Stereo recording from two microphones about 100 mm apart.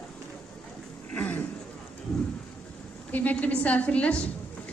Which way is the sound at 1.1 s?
15° left (ahead or behind).